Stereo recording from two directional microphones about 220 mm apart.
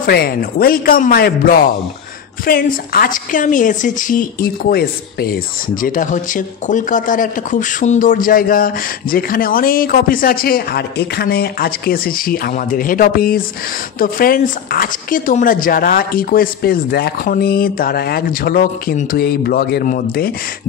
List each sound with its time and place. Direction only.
0.0 s a woman's voice: 45° left (ahead or behind)